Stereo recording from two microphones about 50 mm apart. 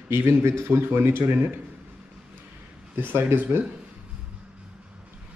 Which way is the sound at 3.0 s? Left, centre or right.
Right.